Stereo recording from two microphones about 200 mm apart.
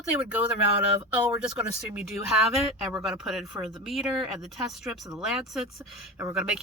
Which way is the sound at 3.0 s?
Centre (ahead or behind).